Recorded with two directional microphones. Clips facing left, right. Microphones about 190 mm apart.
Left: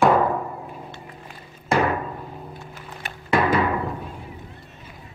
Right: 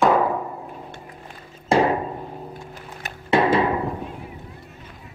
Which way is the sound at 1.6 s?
30° right (ahead or behind).